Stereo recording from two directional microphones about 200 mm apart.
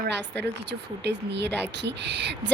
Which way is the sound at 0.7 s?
60° right (ahead or behind).